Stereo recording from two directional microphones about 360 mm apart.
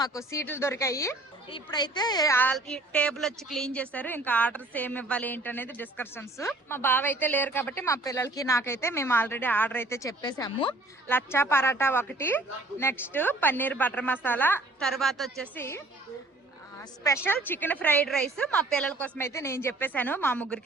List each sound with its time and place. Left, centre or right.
0.0 s a woman's voice: centre
17.0 s a woman's voice: centre